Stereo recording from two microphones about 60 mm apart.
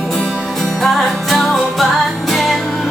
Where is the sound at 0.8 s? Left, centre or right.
Centre.